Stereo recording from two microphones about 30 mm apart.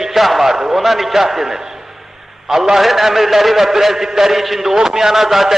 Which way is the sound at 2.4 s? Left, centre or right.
Centre.